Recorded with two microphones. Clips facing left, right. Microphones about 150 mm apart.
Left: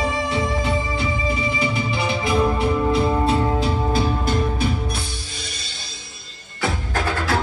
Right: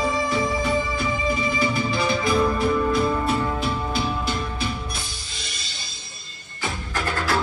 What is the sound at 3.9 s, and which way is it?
Music, 45° left (ahead or behind).